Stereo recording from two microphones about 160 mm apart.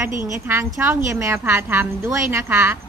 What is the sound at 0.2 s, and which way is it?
A woman's voice, 15° right (ahead or behind).